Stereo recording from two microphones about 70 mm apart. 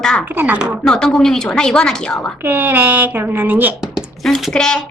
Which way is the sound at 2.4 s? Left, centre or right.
Right.